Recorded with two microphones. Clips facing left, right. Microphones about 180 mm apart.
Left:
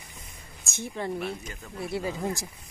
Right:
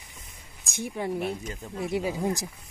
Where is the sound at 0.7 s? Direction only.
10° right (ahead or behind).